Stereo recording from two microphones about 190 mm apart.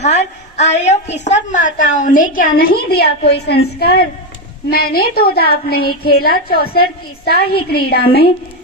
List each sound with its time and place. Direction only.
0.0 s a woman's voice: 35° left (ahead or behind); by 8.3 s 55° left (ahead or behind)